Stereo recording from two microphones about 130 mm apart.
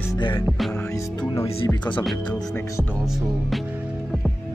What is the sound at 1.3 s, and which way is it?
Speech, 25° left (ahead or behind).